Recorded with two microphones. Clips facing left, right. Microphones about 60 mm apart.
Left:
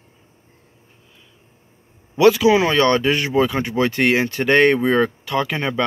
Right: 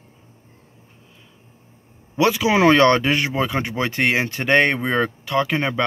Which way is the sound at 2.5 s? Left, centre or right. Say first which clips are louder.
Right 3 dB; right.